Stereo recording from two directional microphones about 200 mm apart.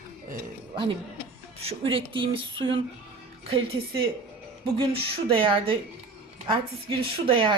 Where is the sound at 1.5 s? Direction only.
30° right (ahead or behind).